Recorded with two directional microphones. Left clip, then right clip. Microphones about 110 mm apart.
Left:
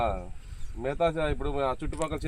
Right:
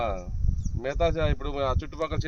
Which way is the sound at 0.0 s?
5° right (ahead or behind).